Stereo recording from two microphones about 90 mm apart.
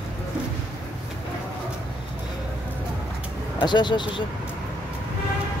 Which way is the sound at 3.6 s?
55° left (ahead or behind).